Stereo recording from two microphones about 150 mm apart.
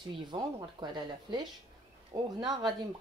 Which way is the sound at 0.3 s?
30° right (ahead or behind).